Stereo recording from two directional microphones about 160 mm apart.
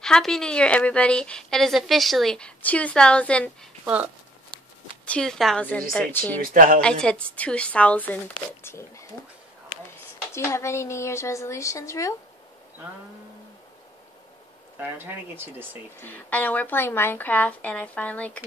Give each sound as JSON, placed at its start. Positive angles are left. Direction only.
{"t": 0.0, "sound": "a woman's voice", "side_deg": 5}
{"t": 3.8, "sound": "speech", "side_deg": -10}
{"t": 5.0, "sound": "a woman's voice", "side_deg": 5}
{"t": 6.4, "sound": "speech", "side_deg": -60}
{"t": 6.8, "sound": "speech", "side_deg": 5}
{"t": 10.3, "sound": "speech", "side_deg": 15}
{"t": 14.8, "sound": "speech", "side_deg": -15}
{"t": 16.0, "sound": "speech", "side_deg": 10}